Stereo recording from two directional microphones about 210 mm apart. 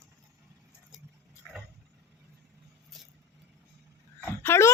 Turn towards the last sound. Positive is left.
turn(degrees=10)  # may be behind; listen again after turning